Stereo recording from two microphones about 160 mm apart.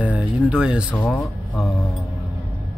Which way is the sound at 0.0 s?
5° right (ahead or behind).